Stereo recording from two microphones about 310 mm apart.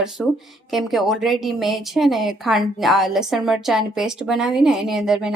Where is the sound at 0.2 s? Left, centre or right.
Centre.